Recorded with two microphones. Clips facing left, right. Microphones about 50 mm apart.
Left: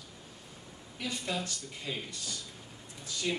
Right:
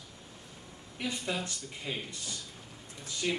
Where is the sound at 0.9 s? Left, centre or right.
Right.